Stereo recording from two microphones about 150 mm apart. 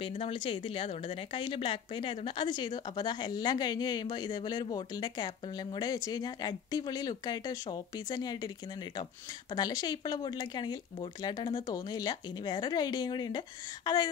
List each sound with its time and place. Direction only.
0.2 s a woman's voice: 35° left (ahead or behind)
9.5 s a woman's voice: 25° left (ahead or behind)